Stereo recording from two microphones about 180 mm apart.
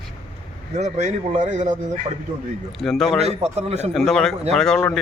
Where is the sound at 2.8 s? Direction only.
Centre (ahead or behind).